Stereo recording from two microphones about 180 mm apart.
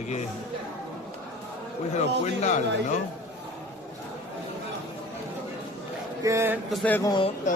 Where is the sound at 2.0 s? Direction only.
40° left (ahead or behind).